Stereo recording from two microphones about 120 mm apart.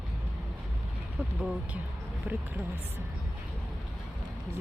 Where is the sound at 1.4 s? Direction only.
10° right (ahead or behind).